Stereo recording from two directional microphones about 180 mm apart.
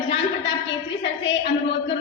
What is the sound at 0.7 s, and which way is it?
Speech, 80° left.